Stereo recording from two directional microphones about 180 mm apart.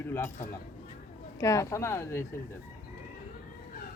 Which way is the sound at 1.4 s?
20° left (ahead or behind).